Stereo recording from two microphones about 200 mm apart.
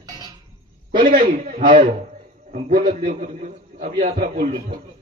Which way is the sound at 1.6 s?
25° right (ahead or behind).